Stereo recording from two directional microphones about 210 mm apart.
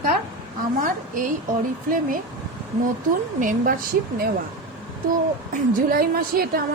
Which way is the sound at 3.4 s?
40° right (ahead or behind).